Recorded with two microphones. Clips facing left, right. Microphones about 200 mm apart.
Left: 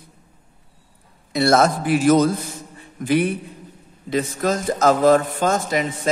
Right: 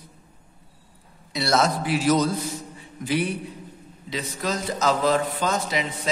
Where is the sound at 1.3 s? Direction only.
50° left (ahead or behind).